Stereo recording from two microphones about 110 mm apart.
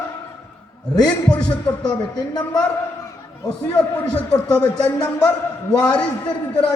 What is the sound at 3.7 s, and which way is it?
A man's voice, 10° left (ahead or behind).